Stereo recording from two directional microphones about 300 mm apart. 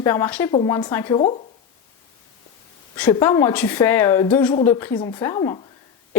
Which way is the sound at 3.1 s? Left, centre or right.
Centre.